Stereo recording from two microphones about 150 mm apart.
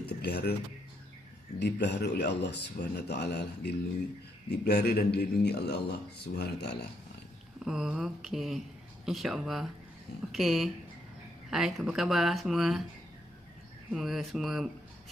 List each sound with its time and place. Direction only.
0.0 s a sound: 90° left
1.6 s a man's voice: 90° left
7.6 s speech: 5° right (ahead or behind)
13.9 s speech: centre (ahead or behind)